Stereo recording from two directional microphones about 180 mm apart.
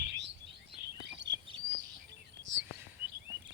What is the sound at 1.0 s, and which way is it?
Chirp, 75° right (ahead or behind).